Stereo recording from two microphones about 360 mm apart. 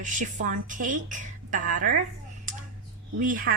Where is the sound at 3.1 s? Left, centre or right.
Right.